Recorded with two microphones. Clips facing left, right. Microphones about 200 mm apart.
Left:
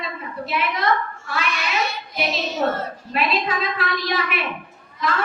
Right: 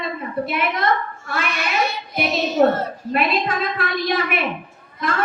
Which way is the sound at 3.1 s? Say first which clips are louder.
Right 2 dB; 50° right (ahead or behind).